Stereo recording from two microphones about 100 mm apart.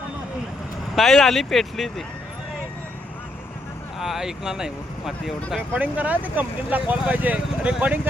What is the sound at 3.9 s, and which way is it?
Speech, 5° right (ahead or behind).